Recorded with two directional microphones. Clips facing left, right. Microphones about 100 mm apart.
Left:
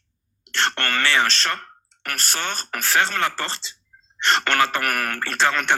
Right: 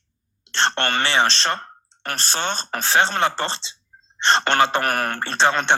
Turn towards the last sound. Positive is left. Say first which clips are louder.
# right 2 dB
turn(degrees=-25)  # may be behind; listen again after turning